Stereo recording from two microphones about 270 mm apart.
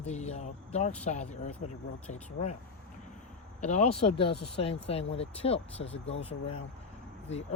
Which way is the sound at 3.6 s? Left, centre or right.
Left.